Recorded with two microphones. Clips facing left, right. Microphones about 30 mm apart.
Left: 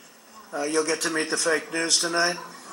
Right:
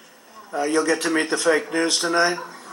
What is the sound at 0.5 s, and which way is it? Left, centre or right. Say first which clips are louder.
Speech: right 4 dB; right.